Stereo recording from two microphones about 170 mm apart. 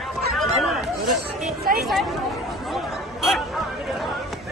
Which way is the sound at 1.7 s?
55° right (ahead or behind).